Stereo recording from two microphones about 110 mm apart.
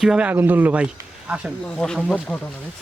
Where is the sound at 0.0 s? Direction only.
5° right (ahead or behind).